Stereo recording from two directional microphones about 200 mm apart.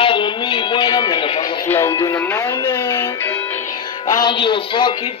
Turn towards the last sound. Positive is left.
turn(degrees=25)  # may be behind; listen again after turning